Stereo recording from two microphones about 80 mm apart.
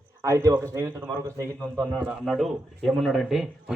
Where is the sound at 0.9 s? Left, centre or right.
Right.